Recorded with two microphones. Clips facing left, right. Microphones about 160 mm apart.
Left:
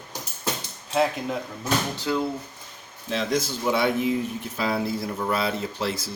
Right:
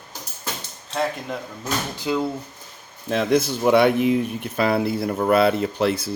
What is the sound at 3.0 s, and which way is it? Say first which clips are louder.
Speech: right 6 dB; 55° right (ahead or behind).